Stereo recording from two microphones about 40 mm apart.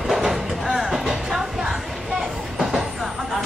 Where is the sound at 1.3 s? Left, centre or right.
Centre.